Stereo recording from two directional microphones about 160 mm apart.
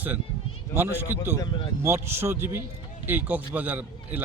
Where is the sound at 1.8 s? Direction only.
15° right (ahead or behind).